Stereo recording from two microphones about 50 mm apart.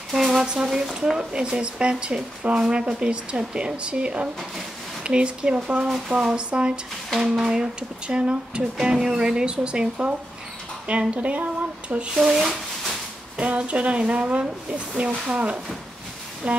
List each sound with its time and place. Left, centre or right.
0.1 s a sound: centre
0.9 s speech: centre
7.2 s speech: centre; by 12.1 s right
12.1 s speech: centre
13.4 s speech: right